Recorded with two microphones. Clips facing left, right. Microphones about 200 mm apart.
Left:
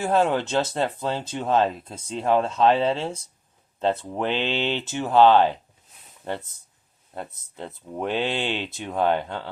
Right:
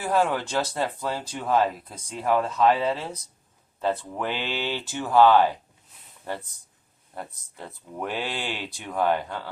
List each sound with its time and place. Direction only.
0.0 s speech: 25° left (ahead or behind)
7.1 s speech: 20° left (ahead or behind)